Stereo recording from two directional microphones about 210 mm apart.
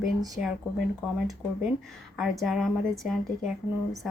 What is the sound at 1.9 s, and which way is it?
Speech, centre (ahead or behind).